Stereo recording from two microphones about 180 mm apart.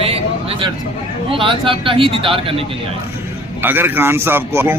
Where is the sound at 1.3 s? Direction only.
30° right (ahead or behind).